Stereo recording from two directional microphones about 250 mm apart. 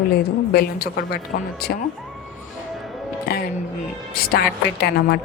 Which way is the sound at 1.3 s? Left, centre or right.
Left.